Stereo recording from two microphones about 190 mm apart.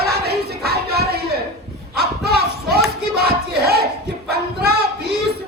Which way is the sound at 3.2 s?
55° right (ahead or behind).